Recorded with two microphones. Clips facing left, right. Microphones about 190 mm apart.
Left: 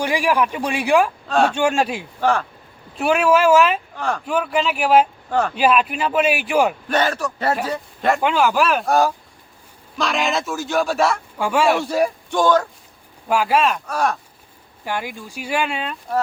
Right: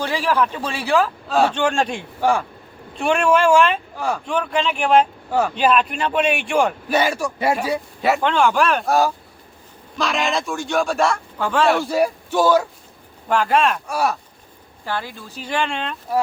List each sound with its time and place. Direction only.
0.0 s speech: 15° left (ahead or behind)
1.3 s a man's voice: 5° right (ahead or behind)
1.5 s speech: 10° left (ahead or behind)
2.2 s speech: 10° right (ahead or behind)
3.0 s a man's voice: 5° left (ahead or behind)
3.9 s speech: 10° right (ahead or behind)
4.3 s a man's voice: 5° left (ahead or behind)
5.3 s speech: 10° right (ahead or behind)
5.5 s a man's voice: 5° left (ahead or behind)
6.8 s speech: 10° right (ahead or behind)
8.2 s a man's voice: 5° left (ahead or behind)
13.2 s speech: 5° left (ahead or behind)
13.8 s speech: 10° right (ahead or behind)
14.8 s speech: 15° left (ahead or behind)